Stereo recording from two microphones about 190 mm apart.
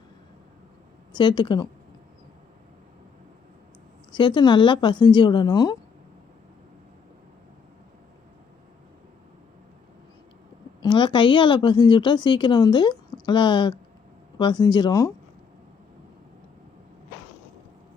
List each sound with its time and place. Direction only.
1.1 s a woman's voice: 25° left (ahead or behind)
4.1 s a woman's voice: 25° left (ahead or behind)
10.8 s a woman's voice: 25° left (ahead or behind)